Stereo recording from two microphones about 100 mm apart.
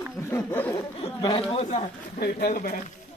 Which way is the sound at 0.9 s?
65° left (ahead or behind).